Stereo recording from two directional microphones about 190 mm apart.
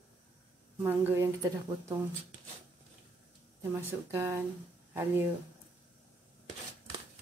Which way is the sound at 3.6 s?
15° right (ahead or behind).